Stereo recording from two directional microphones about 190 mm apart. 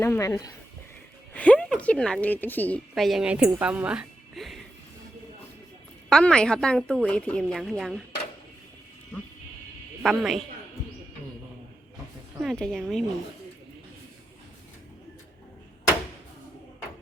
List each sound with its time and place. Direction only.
0.0 s speech: 15° left (ahead or behind)
1.3 s a woman's voice: 5° left (ahead or behind)
6.1 s a woman's voice: 5° left (ahead or behind)
10.0 s a woman's voice: centre (ahead or behind)
12.4 s a woman's voice: centre (ahead or behind)